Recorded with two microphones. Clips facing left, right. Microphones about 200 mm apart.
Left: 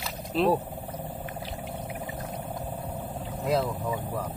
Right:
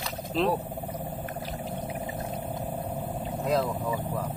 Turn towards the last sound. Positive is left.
turn(degrees=5)  # may be behind; listen again after turning